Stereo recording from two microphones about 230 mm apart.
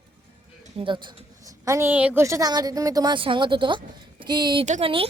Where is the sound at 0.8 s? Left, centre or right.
Right.